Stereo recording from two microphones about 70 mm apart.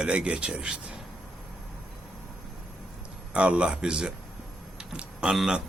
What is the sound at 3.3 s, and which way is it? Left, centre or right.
A man's voice, centre.